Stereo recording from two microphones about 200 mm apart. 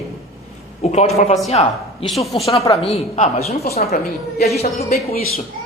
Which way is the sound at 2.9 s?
30° left (ahead or behind).